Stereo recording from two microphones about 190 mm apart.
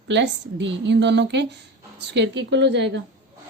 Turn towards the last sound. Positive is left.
turn(degrees=-65)  # may be behind; listen again after turning